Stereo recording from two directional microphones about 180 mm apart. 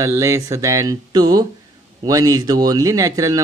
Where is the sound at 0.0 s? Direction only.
15° right (ahead or behind).